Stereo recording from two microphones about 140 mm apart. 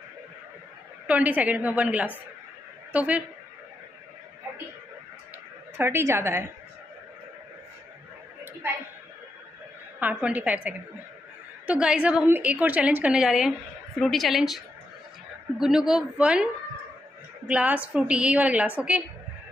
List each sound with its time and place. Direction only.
1.0 s a woman's voice: 10° right (ahead or behind)
5.8 s a woman's voice: 15° right (ahead or behind)
9.9 s a woman's voice: 10° right (ahead or behind)
17.5 s a woman's voice: 10° right (ahead or behind)